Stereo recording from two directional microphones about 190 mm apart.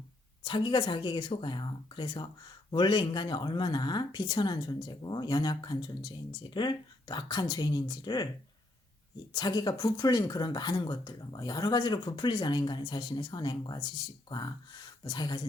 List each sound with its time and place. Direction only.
0.4 s speech: 25° left (ahead or behind)
9.3 s speech: 20° left (ahead or behind)